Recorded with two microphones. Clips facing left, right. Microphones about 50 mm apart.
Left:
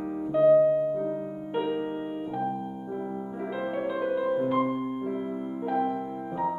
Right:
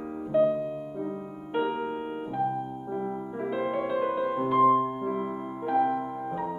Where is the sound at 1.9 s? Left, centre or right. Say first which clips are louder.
Left 1 dB; right.